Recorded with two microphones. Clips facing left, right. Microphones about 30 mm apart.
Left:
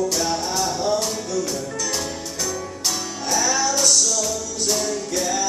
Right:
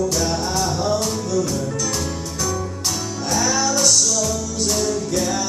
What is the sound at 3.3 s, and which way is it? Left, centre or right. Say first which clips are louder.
Music: right 1 dB; centre.